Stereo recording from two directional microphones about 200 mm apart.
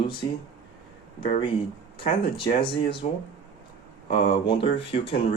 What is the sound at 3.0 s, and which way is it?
Speech, 35° left (ahead or behind).